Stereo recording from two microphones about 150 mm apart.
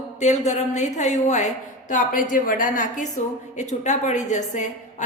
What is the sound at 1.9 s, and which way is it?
A woman's voice, 60° left (ahead or behind).